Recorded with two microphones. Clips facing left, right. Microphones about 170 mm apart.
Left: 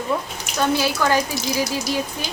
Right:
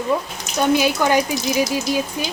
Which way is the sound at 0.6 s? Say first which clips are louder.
Right 3 dB; 15° right (ahead or behind).